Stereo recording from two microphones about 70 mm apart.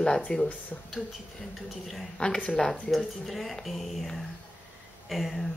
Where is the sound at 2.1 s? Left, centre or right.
Centre.